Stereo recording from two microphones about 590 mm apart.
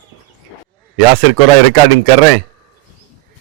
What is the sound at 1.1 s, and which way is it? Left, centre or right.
Speech, right.